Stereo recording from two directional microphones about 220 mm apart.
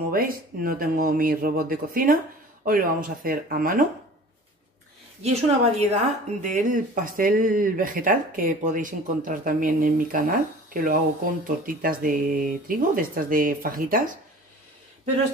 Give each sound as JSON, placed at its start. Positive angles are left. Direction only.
{"t": 0.1, "sound": "speech", "side_deg": -40}
{"t": 5.2, "sound": "speech", "side_deg": -30}